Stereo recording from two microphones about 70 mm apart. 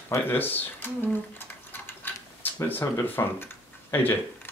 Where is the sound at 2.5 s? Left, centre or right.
Left.